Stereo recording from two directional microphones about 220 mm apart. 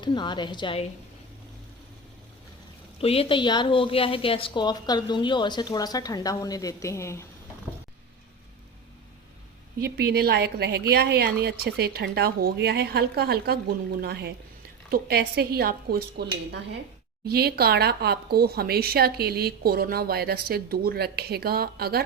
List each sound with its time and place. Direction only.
0.0 s a woman's voice: 20° left (ahead or behind)
3.0 s a woman's voice: 25° left (ahead or behind)
9.7 s speech: 45° right (ahead or behind)